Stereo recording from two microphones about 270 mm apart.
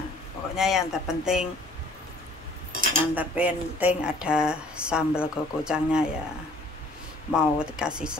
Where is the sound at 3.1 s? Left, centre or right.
Centre.